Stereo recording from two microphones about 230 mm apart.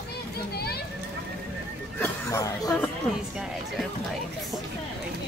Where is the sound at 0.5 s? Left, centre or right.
Left.